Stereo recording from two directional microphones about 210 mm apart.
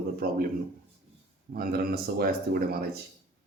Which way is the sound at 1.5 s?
45° right (ahead or behind).